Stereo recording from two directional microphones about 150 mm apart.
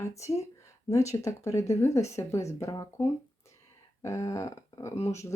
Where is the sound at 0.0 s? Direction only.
20° left (ahead or behind).